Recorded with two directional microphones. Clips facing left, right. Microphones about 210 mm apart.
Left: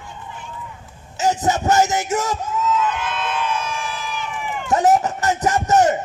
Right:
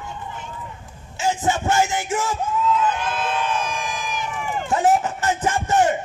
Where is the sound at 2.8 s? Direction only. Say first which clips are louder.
Right 1 dB; 35° right (ahead or behind).